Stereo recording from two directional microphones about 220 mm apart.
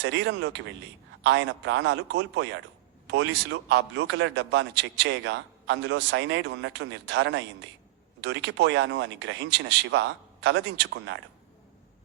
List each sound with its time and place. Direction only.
0.0 s a man's voice: 55° right (ahead or behind)